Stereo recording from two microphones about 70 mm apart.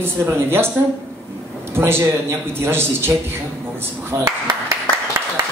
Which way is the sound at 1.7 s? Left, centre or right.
Right.